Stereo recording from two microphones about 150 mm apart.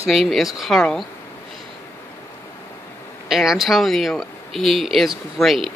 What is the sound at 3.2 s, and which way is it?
Speech, centre (ahead or behind).